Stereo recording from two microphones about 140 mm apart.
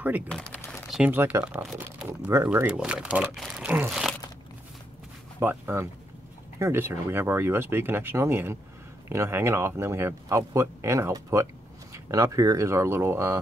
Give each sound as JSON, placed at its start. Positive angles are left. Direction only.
{"t": 0.3, "sound": "speech", "side_deg": 5}
{"t": 1.1, "sound": "speech", "side_deg": -15}
{"t": 2.3, "sound": "speech", "side_deg": -20}
{"t": 2.6, "sound": "speech", "side_deg": -10}
{"t": 5.4, "sound": "speech", "side_deg": -15}